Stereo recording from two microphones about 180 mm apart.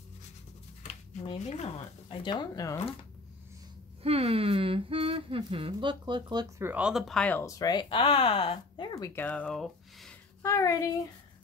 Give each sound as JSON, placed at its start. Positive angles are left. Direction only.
{"t": 1.1, "sound": "speech", "side_deg": 35}
{"t": 4.0, "sound": "speech", "side_deg": -35}
{"t": 6.6, "sound": "speech", "side_deg": -10}
{"t": 10.4, "sound": "speech", "side_deg": 15}